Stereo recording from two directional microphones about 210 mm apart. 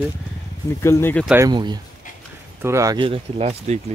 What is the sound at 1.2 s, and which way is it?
Speech, 10° right (ahead or behind).